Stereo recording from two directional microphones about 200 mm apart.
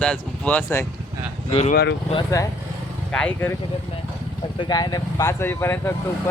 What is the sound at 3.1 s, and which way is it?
Speech, 10° left (ahead or behind).